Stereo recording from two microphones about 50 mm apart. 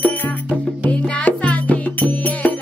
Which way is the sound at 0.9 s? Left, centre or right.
Left.